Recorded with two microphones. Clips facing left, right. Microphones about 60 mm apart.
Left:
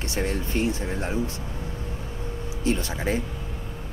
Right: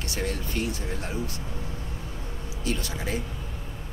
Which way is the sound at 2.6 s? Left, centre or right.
Left.